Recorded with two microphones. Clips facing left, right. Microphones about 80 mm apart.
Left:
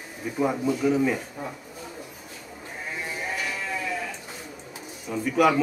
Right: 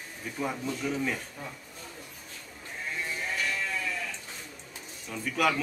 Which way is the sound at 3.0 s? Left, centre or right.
Centre.